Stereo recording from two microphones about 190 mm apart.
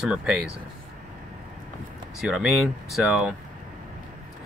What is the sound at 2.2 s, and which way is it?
Speech, centre (ahead or behind).